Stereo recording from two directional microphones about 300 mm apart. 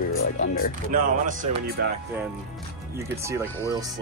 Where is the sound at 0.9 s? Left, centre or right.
Right.